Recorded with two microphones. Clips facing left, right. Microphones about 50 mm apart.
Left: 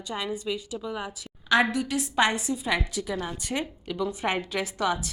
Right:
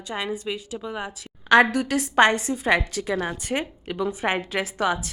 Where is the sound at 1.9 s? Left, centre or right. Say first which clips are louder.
Right 6 dB; right.